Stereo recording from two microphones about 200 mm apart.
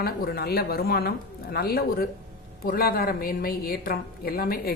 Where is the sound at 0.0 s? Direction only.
50° left (ahead or behind).